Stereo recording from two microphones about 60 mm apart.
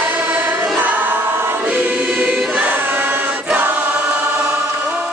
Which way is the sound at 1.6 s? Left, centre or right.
Right.